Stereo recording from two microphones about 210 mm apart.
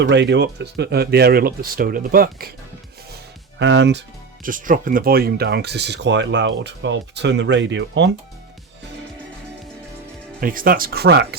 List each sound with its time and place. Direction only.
0.0 s speech: 55° right (ahead or behind)
3.6 s speech: 55° right (ahead or behind)
4.4 s speech: 40° right (ahead or behind); by 8.1 s 60° right (ahead or behind)
10.4 s speech: 40° right (ahead or behind)